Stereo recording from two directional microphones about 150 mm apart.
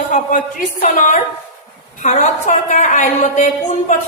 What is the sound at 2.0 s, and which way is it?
A woman's voice, 55° left (ahead or behind).